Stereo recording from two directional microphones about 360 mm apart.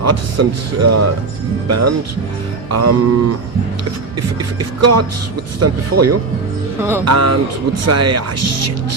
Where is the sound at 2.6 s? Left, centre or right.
Right.